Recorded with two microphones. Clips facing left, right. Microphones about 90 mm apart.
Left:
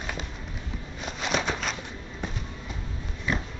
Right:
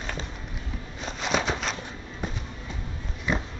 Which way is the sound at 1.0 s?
Centre (ahead or behind).